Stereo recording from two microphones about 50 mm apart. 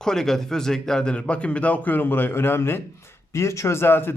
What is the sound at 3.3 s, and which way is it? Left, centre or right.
Speech, left.